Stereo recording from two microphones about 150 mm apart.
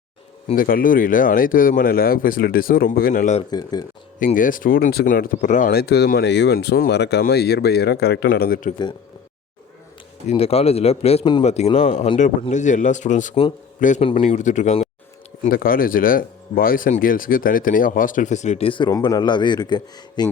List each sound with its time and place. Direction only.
0.5 s speech: 70° left (ahead or behind)
3.5 s speech: 25° left (ahead or behind)
4.4 s speech: 65° left (ahead or behind); by 8.7 s 90° left
10.2 s a man's voice: 40° left (ahead or behind); by 14.0 s 55° left (ahead or behind)
14.0 s speech: 40° left (ahead or behind)
14.3 s a man's voice: 55° left (ahead or behind)
15.4 s speech: 75° left (ahead or behind); by 18.9 s 35° left (ahead or behind)
18.9 s speech: 25° left (ahead or behind)